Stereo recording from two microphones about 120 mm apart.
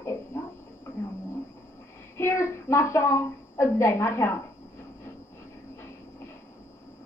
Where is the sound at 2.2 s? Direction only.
25° left (ahead or behind).